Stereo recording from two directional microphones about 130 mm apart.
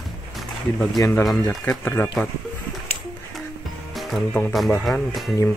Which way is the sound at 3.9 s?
Centre (ahead or behind).